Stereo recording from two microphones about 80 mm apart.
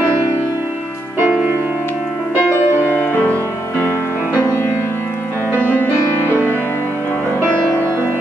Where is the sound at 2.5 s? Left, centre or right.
Left.